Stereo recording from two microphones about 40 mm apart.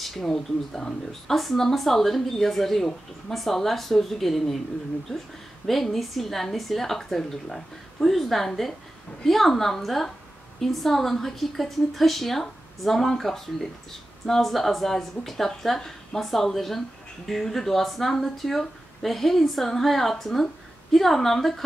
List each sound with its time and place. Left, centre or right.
0.0 s a sound: centre
0.3 s speech: centre
5.7 s a woman's voice: centre